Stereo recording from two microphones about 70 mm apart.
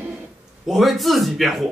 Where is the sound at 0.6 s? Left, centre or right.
Centre.